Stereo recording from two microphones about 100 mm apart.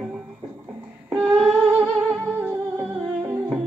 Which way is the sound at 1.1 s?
15° right (ahead or behind).